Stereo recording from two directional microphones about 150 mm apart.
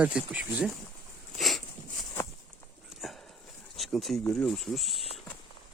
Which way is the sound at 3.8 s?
Centre (ahead or behind).